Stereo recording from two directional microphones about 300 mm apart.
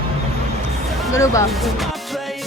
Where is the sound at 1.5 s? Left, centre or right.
Centre.